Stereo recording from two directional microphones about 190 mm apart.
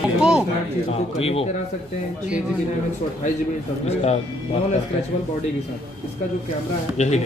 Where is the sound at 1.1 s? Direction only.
30° left (ahead or behind).